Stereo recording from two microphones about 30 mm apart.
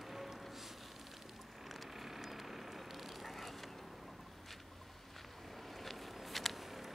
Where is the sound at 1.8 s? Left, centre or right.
Centre.